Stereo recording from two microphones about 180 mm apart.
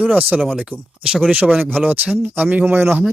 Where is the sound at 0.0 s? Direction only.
10° right (ahead or behind).